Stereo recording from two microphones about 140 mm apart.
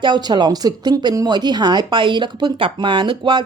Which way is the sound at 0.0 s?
30° right (ahead or behind).